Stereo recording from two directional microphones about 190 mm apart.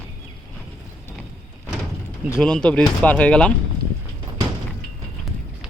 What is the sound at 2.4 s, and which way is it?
Speech, 5° left (ahead or behind).